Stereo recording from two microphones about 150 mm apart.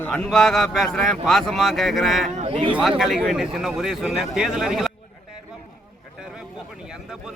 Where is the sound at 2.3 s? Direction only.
40° right (ahead or behind).